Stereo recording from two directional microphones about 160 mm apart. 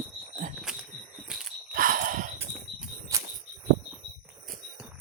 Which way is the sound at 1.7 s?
60° right (ahead or behind).